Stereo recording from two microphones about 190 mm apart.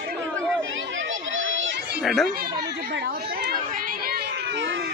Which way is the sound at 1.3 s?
90° right.